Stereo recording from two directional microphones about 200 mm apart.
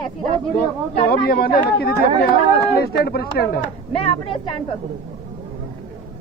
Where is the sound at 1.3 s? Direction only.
50° left (ahead or behind).